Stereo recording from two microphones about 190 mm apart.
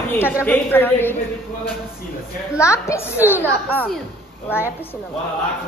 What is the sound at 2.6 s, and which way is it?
Speech, 15° left (ahead or behind).